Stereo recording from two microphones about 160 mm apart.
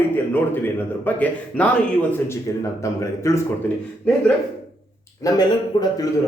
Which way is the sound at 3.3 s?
20° left (ahead or behind).